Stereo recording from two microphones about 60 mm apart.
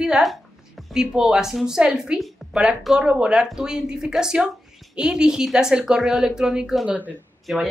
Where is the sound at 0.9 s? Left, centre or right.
Centre.